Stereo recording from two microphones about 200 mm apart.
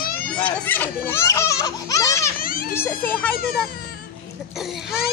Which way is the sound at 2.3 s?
45° left (ahead or behind).